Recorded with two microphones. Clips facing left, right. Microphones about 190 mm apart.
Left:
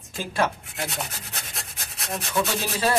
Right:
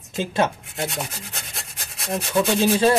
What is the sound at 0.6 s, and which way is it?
Rub, centre (ahead or behind).